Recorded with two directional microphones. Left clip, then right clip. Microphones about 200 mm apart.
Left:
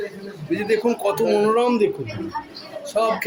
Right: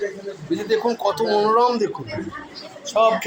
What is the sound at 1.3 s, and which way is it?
Speech, 20° left (ahead or behind).